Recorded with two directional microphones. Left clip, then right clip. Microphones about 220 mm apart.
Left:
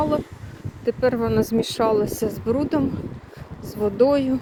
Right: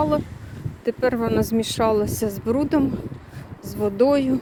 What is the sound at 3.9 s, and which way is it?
Speech, 10° right (ahead or behind).